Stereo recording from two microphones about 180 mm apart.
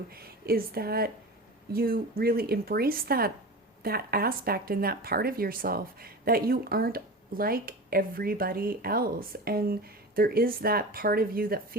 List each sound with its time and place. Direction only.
0.1 s speech: 60° right (ahead or behind)